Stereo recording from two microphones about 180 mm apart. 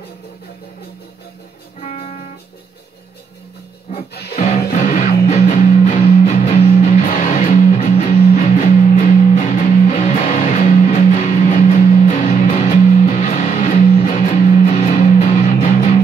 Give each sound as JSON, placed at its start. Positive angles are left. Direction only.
{"t": 1.8, "sound": "music", "side_deg": 40}
{"t": 4.7, "sound": "music", "side_deg": 40}